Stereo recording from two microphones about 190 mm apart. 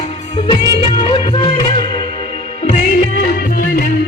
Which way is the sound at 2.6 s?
40° left (ahead or behind).